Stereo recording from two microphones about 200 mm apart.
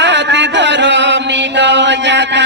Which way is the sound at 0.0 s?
60° right (ahead or behind).